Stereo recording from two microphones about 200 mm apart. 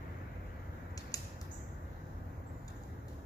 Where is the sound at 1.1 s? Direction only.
20° left (ahead or behind).